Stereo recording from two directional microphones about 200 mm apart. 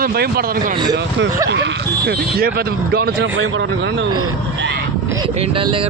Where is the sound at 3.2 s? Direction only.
75° right (ahead or behind).